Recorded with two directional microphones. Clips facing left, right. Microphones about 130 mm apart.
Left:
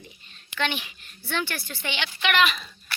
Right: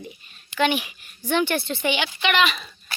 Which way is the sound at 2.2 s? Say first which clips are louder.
Left 2 dB; centre (ahead or behind).